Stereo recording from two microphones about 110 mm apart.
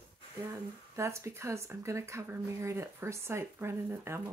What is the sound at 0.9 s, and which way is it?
Speech, 25° right (ahead or behind).